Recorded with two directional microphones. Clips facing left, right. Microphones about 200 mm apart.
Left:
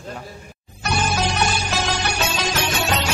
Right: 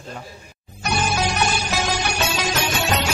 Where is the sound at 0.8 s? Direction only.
10° right (ahead or behind).